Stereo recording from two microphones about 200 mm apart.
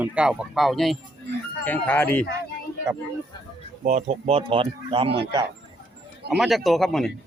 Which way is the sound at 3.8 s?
35° right (ahead or behind).